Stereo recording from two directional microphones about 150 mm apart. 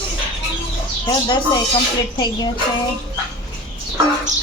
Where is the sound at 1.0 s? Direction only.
30° left (ahead or behind).